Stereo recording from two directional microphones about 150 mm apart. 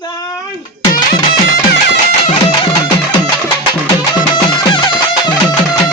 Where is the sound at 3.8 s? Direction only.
30° left (ahead or behind).